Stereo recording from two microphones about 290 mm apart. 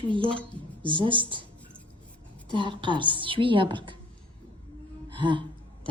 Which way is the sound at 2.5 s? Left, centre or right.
Centre.